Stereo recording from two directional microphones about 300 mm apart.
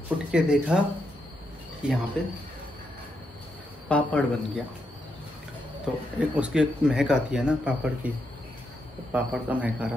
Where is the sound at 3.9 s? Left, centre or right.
Centre.